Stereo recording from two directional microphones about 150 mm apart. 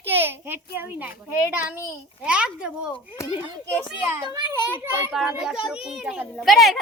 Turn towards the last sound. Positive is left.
turn(degrees=0)  # may be behind; listen again after turning